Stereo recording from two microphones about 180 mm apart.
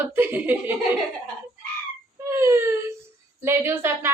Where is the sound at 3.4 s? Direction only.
15° right (ahead or behind).